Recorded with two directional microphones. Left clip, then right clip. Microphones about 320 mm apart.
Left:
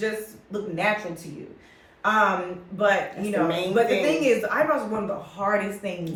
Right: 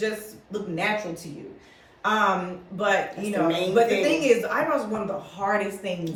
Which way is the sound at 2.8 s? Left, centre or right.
Centre.